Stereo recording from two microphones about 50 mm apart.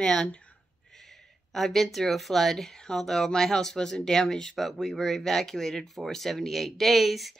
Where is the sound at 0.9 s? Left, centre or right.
Centre.